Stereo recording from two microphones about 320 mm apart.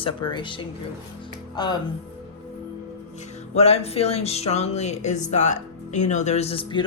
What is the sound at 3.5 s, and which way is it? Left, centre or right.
Speech, centre.